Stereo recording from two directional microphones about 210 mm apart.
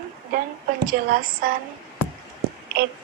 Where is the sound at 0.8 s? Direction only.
45° right (ahead or behind).